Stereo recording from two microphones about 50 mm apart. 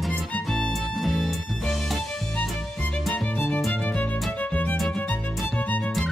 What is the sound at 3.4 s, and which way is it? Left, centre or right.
Music, left.